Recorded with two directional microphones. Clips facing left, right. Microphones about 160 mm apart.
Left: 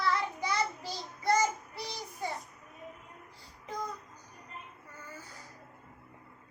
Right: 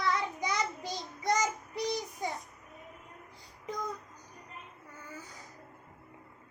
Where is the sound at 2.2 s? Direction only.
15° right (ahead or behind).